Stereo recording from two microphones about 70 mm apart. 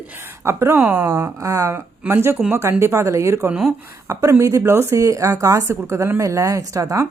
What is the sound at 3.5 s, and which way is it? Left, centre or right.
Speech, centre.